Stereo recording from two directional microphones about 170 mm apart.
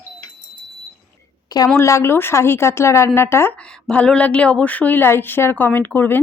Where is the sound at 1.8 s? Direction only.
15° left (ahead or behind).